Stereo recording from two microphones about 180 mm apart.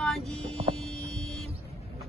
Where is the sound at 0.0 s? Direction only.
Centre (ahead or behind).